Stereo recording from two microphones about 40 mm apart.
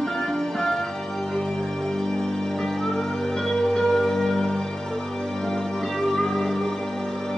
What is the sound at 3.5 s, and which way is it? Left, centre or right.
Music, centre.